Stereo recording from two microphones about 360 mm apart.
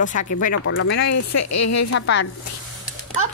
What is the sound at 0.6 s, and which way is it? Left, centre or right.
Speech, left.